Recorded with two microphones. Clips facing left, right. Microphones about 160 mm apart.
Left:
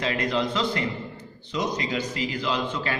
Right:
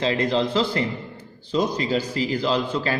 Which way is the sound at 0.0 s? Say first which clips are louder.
Right 4 dB; 30° right (ahead or behind).